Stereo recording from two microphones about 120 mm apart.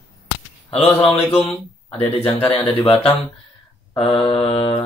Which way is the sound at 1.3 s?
45° left (ahead or behind).